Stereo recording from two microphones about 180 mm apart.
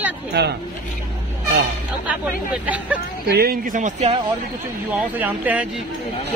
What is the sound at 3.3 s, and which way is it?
Speech, 55° right (ahead or behind).